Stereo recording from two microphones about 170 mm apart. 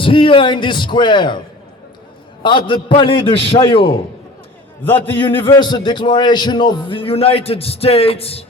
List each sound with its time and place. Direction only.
0.0 s a man's voice: 30° left (ahead or behind)
2.4 s a man's voice: 30° left (ahead or behind)
4.8 s a man's voice: 10° left (ahead or behind)
5.2 s a man's voice: 30° left (ahead or behind)